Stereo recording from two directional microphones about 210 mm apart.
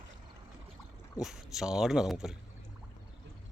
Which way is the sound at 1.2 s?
Centre (ahead or behind).